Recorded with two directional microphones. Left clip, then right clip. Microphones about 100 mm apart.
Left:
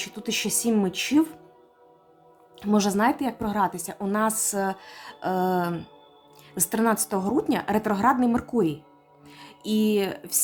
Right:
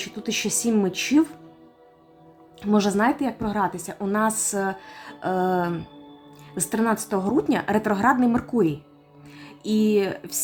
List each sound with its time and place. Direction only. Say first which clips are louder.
0.0 s speech: right 1 dB; 25° left (ahead or behind)
2.6 s a woman's voice: right 2 dB; 20° left (ahead or behind)
9.3 s music: right 2 dB; 15° left (ahead or behind)